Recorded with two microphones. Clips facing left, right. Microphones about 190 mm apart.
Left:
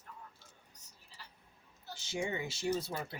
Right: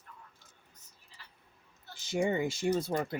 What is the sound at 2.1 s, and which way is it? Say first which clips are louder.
Speech: right 8 dB; 55° right (ahead or behind).